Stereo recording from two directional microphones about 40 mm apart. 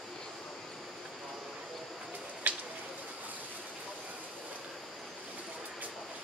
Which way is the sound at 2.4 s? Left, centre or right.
Right.